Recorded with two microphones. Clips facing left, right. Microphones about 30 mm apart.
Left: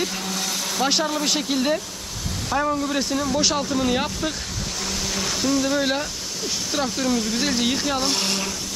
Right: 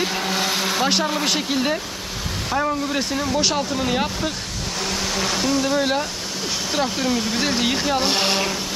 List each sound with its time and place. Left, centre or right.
0.0 s vehicle: right
0.8 s speech: centre; by 8.5 s right